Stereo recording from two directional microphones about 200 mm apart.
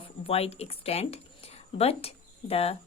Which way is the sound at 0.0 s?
30° left (ahead or behind).